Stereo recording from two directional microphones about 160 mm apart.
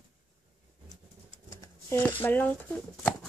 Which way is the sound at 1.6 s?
15° left (ahead or behind).